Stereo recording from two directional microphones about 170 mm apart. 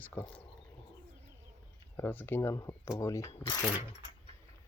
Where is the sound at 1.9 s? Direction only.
10° left (ahead or behind).